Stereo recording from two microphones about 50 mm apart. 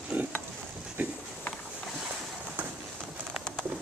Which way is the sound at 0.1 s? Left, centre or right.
Right.